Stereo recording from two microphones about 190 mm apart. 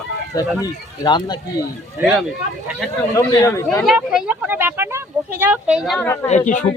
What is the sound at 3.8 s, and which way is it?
Speech, centre (ahead or behind).